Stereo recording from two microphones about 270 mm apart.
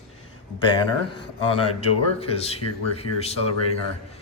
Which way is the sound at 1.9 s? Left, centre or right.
Left.